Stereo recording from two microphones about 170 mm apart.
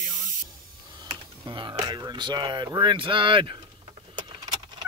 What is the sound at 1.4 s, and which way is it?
Speech, 25° right (ahead or behind).